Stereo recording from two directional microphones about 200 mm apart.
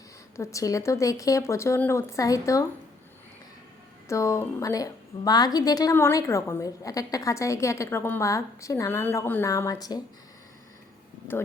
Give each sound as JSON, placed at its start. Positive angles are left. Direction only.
{"t": 0.3, "sound": "a woman's voice", "side_deg": 15}
{"t": 4.1, "sound": "a woman's voice", "side_deg": 15}